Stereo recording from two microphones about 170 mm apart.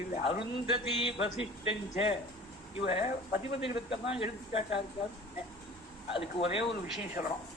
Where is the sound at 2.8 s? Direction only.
35° left (ahead or behind).